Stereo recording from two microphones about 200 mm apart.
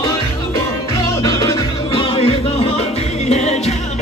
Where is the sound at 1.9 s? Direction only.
25° left (ahead or behind).